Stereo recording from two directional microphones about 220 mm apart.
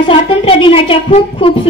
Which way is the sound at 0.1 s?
25° left (ahead or behind).